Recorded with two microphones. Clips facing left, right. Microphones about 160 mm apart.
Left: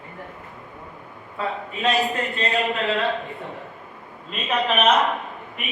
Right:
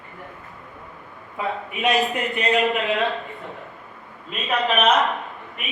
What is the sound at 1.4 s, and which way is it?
A man's voice, 15° right (ahead or behind).